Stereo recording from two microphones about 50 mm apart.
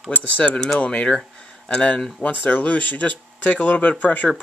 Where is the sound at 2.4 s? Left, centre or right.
Left.